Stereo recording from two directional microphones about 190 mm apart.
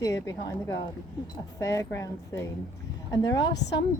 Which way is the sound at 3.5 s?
65° left (ahead or behind).